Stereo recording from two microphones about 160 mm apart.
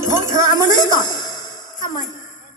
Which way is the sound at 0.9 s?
25° left (ahead or behind).